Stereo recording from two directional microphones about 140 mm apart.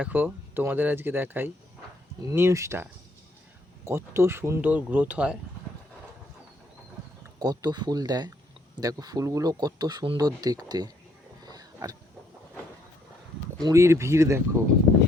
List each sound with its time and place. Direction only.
0.0 s speech: 10° right (ahead or behind)
7.3 s speech: 30° right (ahead or behind)
11.4 s pig: 25° right (ahead or behind)
13.6 s speech: 25° right (ahead or behind)